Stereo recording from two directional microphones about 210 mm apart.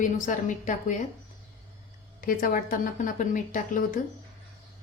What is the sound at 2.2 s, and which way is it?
Speech, 40° left (ahead or behind).